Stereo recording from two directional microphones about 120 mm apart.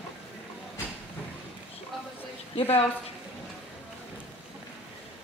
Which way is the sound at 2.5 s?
55° left (ahead or behind).